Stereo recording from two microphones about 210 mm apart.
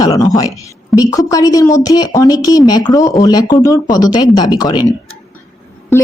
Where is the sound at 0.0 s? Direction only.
15° left (ahead or behind).